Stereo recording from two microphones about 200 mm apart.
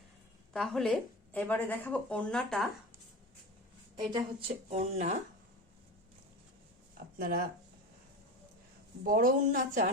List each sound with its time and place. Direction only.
0.5 s speech: centre (ahead or behind)
3.9 s a woman's voice: 20° right (ahead or behind)
4.7 s speech: 35° right (ahead or behind)
6.9 s speech: 50° right (ahead or behind)
9.0 s speech: 45° right (ahead or behind)